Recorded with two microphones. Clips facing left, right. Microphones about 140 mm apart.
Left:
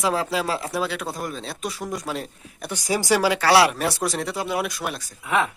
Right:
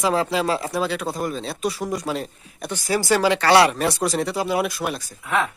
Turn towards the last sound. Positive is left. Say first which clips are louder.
# even
turn(degrees=0)  # may be behind; listen again after turning